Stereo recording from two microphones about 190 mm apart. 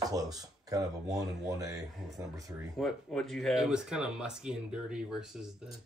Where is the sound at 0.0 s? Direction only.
20° right (ahead or behind).